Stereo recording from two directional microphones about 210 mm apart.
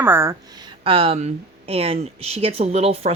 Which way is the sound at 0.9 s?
25° right (ahead or behind).